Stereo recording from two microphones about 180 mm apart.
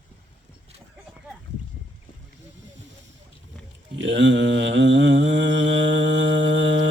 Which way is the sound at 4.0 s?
85° right.